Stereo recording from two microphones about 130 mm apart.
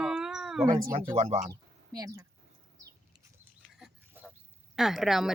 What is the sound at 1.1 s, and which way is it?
Speech, 55° right (ahead or behind).